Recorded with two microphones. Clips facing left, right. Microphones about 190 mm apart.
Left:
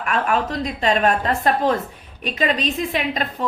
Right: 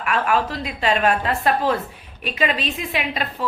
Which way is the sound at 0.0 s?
40° left (ahead or behind).